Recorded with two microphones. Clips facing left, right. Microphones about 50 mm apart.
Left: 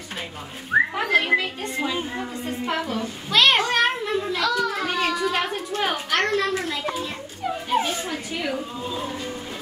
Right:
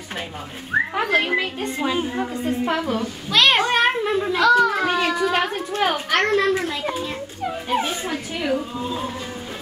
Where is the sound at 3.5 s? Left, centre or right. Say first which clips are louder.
Right 2 dB; right.